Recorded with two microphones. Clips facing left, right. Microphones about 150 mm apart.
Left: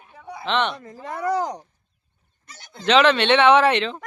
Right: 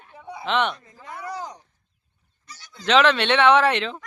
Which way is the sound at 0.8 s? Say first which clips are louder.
Left 8 dB; 45° left (ahead or behind).